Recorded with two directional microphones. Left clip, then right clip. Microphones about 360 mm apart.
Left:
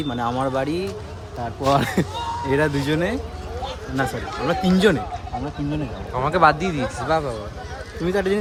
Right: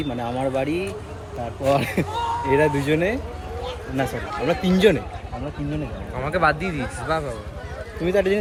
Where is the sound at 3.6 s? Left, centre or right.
Left.